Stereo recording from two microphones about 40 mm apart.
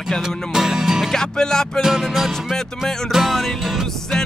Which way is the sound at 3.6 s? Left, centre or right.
Centre.